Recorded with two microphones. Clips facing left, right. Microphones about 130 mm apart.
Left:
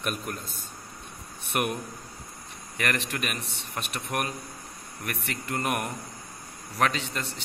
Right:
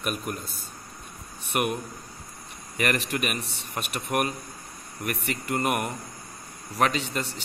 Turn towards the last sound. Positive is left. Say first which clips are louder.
# right 3 dB
turn(degrees=-5)  # may be behind; listen again after turning